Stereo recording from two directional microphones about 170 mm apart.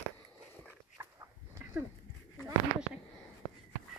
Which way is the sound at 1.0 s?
15° right (ahead or behind).